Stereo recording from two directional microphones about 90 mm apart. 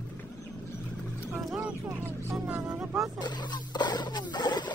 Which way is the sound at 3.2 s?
55° left (ahead or behind).